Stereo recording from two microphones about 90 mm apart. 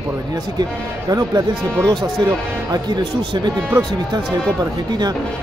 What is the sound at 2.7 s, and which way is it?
Speech, 55° right (ahead or behind).